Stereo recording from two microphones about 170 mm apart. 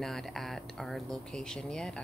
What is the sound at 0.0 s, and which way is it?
A woman's voice, centre (ahead or behind).